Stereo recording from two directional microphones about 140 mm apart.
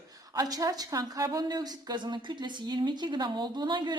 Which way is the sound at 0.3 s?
25° right (ahead or behind).